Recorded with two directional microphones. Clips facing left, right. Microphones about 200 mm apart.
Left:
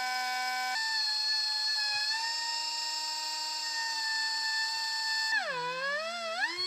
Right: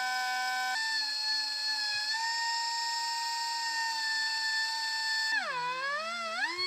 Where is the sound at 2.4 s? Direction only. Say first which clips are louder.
Right 5 dB; 35° left (ahead or behind).